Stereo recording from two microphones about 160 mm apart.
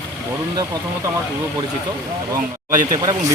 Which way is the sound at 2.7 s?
60° right (ahead or behind).